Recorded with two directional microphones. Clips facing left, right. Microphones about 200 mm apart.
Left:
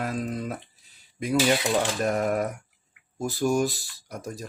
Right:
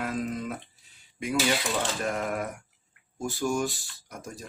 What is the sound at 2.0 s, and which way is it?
Speech, 40° left (ahead or behind).